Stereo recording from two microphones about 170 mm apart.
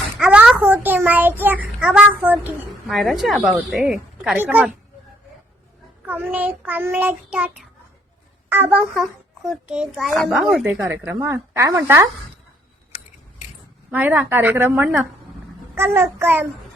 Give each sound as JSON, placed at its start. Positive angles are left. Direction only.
{"t": 0.2, "sound": "a child's voice", "side_deg": -5}
{"t": 6.1, "sound": "child singing", "side_deg": -10}
{"t": 8.4, "sound": "a child's voice", "side_deg": -10}
{"t": 10.4, "sound": "child singing", "side_deg": -10}
{"t": 13.9, "sound": "child singing", "side_deg": -10}